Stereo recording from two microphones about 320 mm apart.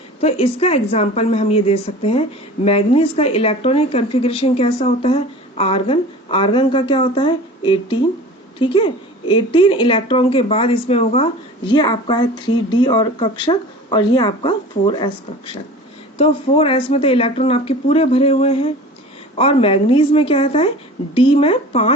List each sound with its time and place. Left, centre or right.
0.2 s a woman's voice: centre
16.1 s speech: centre